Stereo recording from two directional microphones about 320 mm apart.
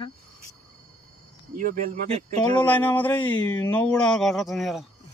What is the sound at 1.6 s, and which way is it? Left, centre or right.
Speech, right.